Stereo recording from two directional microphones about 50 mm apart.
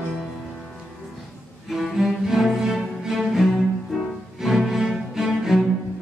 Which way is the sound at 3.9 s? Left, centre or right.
Centre.